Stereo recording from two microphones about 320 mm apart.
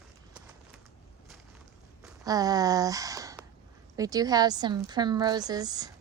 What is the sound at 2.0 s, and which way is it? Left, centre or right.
Walk, centre.